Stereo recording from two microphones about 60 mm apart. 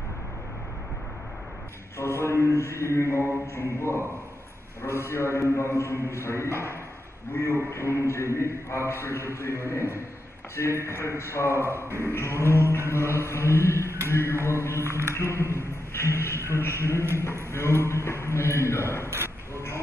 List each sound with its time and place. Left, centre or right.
2.2 s a man's voice: left
5.1 s a man's voice: left
6.5 s a man's voice: right
7.4 s a man's voice: left
10.7 s a man's voice: right
11.0 s a man's voice: left
11.5 s a man's voice: right
12.1 s a man's voice: left
12.6 s a man's voice: right
12.9 s a man's voice: left
14.8 s a man's voice: right
15.1 s a man's voice: left
19.0 s a sound: right